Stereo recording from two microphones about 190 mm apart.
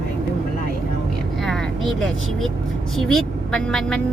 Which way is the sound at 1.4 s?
Centre (ahead or behind).